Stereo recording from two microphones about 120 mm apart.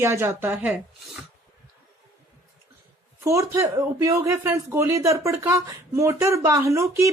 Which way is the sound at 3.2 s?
25° right (ahead or behind).